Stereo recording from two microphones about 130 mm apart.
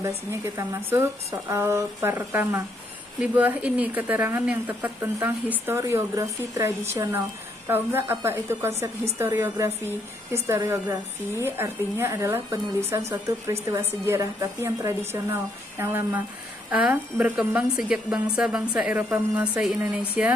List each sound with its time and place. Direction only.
0.3 s speech: 20° right (ahead or behind)